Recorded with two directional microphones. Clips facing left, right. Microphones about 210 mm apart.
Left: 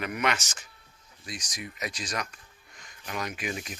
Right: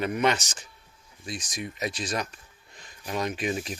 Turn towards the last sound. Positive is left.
turn(degrees=-30)  # may be behind; listen again after turning